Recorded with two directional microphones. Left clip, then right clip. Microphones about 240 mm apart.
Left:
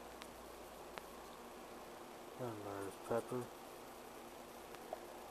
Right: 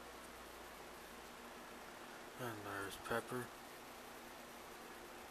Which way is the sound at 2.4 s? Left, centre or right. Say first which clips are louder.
Even; right.